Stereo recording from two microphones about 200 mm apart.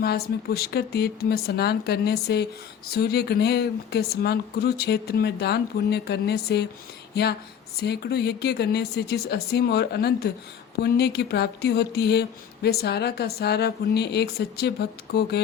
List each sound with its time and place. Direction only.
0.0 s speech: 50° left (ahead or behind)
7.1 s a sound: 55° left (ahead or behind)
7.8 s speech: 55° left (ahead or behind)